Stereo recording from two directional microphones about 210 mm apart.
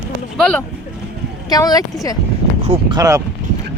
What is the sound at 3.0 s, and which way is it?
Speech, 15° right (ahead or behind).